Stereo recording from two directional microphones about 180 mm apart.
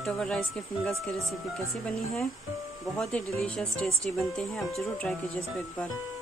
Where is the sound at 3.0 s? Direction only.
5° left (ahead or behind).